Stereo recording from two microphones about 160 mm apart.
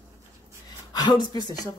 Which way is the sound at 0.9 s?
25° left (ahead or behind).